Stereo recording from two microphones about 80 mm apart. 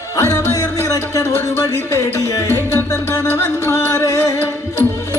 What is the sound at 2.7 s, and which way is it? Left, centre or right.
Music, left.